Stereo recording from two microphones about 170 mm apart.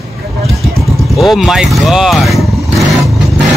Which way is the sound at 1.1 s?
Centre (ahead or behind).